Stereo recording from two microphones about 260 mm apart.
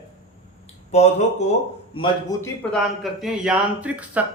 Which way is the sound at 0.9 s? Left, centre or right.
Left.